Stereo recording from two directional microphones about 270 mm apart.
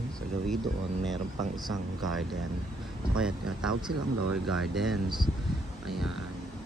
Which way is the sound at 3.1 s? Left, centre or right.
Centre.